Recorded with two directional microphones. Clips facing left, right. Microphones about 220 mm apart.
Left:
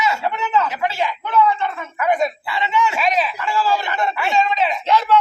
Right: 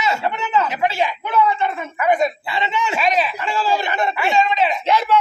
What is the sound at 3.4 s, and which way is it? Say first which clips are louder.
Speech: even; 20° right (ahead or behind).